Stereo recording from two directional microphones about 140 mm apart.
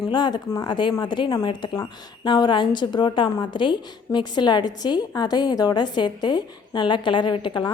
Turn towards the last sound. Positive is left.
turn(degrees=35)  # may be behind; listen again after turning